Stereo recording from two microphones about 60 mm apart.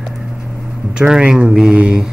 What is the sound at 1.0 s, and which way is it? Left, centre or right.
Speech, centre.